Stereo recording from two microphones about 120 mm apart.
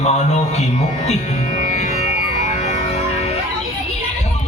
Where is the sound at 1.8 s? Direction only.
65° left (ahead or behind).